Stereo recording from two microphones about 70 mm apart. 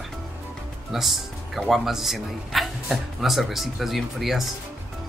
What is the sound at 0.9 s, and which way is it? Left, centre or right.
Speech, centre.